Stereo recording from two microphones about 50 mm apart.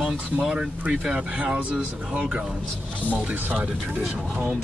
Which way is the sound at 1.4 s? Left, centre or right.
Right.